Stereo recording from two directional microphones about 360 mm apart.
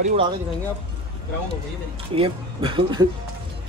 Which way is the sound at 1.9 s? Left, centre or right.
Centre.